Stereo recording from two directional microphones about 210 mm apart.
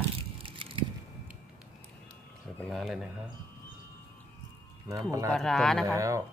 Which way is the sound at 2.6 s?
Centre (ahead or behind).